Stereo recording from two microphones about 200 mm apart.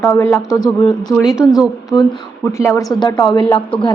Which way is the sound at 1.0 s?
Centre (ahead or behind).